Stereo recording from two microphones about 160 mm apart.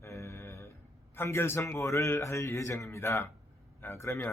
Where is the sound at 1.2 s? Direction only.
15° left (ahead or behind).